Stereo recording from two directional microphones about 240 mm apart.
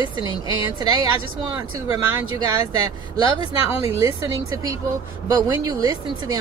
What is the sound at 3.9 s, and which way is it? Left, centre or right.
A woman's voice, centre.